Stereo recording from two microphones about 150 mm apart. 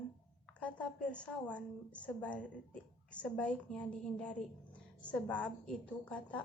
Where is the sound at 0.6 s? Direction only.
5° left (ahead or behind).